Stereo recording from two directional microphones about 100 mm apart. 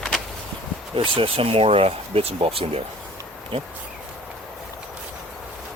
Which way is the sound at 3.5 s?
60° right (ahead or behind).